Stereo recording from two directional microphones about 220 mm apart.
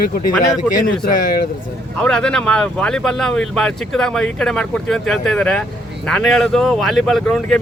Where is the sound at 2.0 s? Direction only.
5° left (ahead or behind).